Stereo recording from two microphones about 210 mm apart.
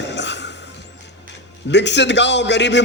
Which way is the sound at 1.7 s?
55° left (ahead or behind).